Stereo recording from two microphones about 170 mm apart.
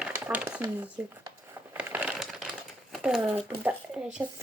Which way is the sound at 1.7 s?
5° right (ahead or behind).